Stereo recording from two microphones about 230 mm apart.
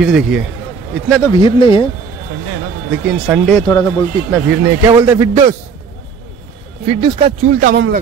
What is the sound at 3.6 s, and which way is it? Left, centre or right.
Speech, centre.